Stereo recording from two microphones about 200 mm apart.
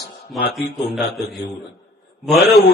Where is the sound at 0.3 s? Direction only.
50° left (ahead or behind).